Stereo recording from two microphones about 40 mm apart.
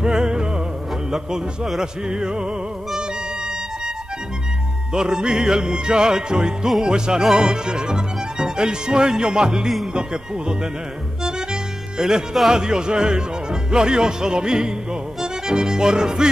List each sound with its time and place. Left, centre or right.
0.0 s music: centre
4.9 s music: right
12.0 s music: centre